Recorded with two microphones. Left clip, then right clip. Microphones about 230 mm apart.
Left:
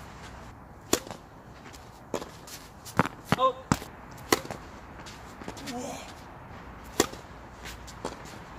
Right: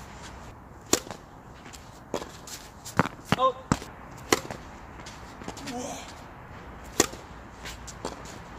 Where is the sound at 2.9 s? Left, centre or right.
Centre.